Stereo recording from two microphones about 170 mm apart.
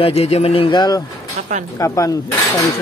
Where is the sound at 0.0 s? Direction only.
35° left (ahead or behind); by 2.6 s 20° left (ahead or behind).